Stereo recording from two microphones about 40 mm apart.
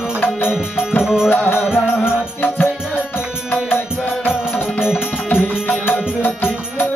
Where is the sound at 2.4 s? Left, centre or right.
Left.